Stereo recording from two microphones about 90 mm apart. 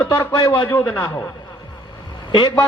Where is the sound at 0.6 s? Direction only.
25° left (ahead or behind).